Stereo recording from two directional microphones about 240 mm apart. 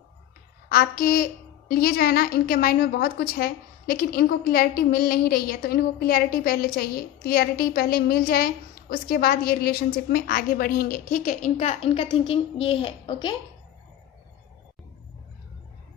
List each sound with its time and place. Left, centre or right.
0.7 s a woman's voice: left; by 13.4 s centre